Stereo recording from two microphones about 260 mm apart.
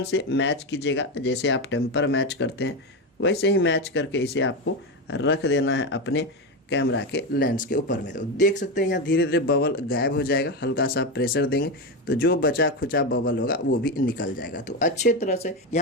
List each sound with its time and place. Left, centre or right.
0.0 s speech: left